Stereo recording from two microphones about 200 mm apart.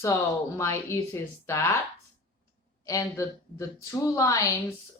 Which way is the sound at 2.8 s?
15° left (ahead or behind).